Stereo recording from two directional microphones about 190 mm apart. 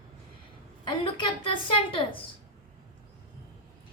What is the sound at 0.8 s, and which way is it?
Speech, 25° left (ahead or behind).